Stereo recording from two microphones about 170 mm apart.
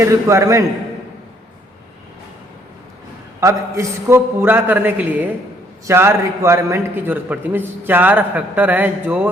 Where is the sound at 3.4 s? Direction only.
15° right (ahead or behind).